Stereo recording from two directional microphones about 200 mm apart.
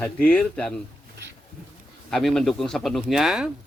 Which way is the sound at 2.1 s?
Centre (ahead or behind).